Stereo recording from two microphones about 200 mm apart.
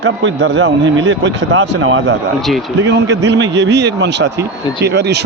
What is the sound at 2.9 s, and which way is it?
Speech, 60° right (ahead or behind).